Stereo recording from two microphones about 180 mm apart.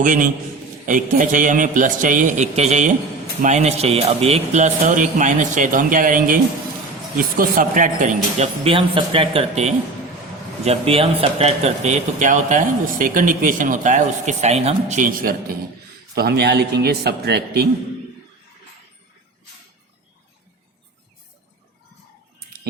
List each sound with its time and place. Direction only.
0.0 s a man's voice: 45° right (ahead or behind); by 17.7 s 65° right (ahead or behind)